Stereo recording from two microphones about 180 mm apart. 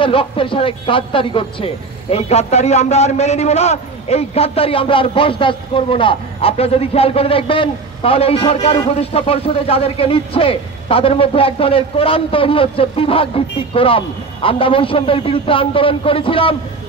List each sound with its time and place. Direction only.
0.0 s speech: 30° left (ahead or behind)